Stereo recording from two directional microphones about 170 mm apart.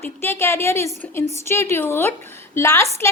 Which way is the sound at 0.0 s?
15° left (ahead or behind).